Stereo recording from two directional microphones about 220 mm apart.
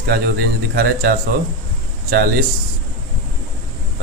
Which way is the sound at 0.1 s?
45° right (ahead or behind).